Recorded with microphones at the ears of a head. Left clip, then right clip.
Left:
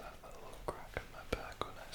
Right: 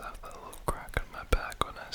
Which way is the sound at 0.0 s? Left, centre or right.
Right.